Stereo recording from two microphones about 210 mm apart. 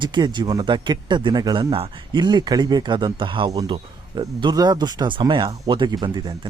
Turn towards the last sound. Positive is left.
turn(degrees=-20)  # may be behind; listen again after turning